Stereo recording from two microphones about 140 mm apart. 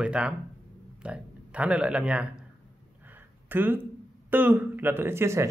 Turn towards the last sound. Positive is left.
turn(degrees=-20)  # may be behind; listen again after turning